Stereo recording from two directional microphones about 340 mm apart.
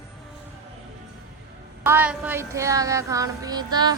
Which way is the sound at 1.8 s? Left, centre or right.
Centre.